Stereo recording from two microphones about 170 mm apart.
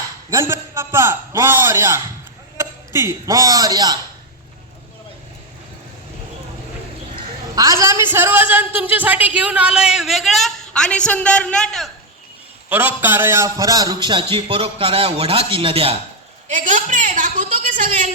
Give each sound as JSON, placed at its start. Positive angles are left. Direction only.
{"t": 0.3, "sound": "a man's voice", "side_deg": -15}
{"t": 7.5, "sound": "a man's voice", "side_deg": -20}
{"t": 12.6, "sound": "a man's voice", "side_deg": -10}
{"t": 16.5, "sound": "a man's voice", "side_deg": -50}